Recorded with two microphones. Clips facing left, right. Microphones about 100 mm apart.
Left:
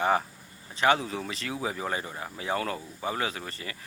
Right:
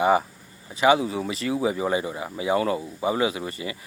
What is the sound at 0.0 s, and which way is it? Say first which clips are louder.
Speech: right 5 dB; 10° right (ahead or behind).